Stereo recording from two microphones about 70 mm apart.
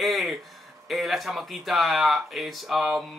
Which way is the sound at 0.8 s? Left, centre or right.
Centre.